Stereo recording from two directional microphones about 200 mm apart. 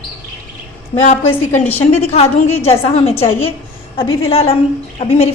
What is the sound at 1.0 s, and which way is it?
Speech, 35° left (ahead or behind).